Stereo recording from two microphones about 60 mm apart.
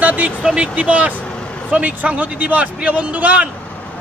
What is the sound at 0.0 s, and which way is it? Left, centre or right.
Speech, right.